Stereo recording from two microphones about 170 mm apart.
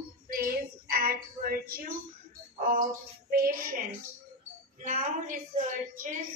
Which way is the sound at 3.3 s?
60° right (ahead or behind).